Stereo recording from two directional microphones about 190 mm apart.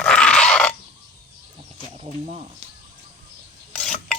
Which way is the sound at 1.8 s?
35° right (ahead or behind).